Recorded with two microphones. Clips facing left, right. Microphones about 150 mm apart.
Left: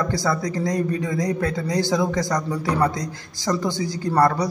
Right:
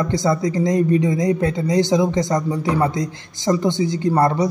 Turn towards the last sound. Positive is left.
turn(degrees=-20)  # may be behind; listen again after turning